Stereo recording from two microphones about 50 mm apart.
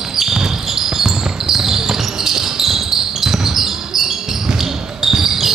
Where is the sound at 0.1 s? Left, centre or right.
Centre.